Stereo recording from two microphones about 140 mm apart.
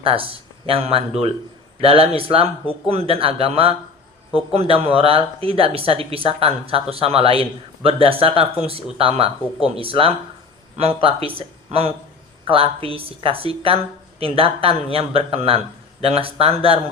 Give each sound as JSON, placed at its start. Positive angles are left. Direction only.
{"t": 0.0, "sound": "speech", "side_deg": -40}